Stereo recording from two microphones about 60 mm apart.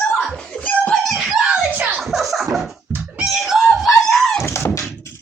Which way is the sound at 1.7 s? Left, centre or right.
Right.